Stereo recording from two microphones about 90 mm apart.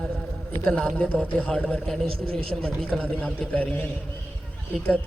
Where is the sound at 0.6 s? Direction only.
10° left (ahead or behind).